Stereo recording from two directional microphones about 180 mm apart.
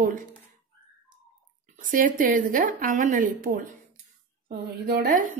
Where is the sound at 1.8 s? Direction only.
50° right (ahead or behind).